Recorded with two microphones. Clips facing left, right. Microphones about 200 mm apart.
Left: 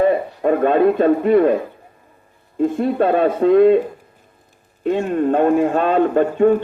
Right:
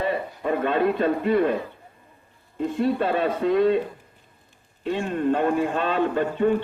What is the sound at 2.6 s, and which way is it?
A man's voice, 50° left (ahead or behind).